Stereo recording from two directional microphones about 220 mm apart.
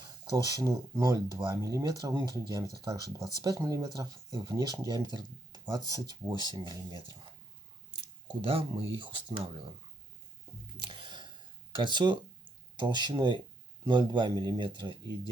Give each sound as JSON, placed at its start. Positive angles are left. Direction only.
{"t": 0.3, "sound": "speech", "side_deg": -15}
{"t": 8.4, "sound": "speech", "side_deg": -25}
{"t": 10.8, "sound": "a sound", "side_deg": -20}
{"t": 11.8, "sound": "speech", "side_deg": -20}